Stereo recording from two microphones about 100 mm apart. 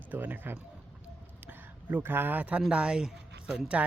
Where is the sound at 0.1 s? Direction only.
20° right (ahead or behind).